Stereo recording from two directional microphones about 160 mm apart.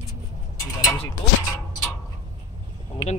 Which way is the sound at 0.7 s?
20° left (ahead or behind).